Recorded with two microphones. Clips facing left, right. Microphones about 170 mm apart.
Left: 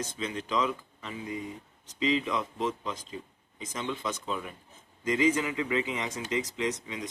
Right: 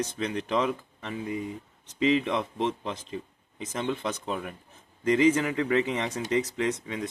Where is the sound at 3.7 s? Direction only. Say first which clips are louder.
Right 4 dB; 55° right (ahead or behind).